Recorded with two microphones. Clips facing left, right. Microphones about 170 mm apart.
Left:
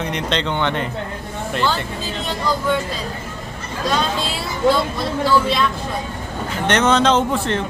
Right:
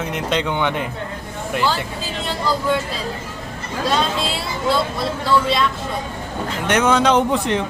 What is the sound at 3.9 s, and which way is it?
A man's voice, centre (ahead or behind).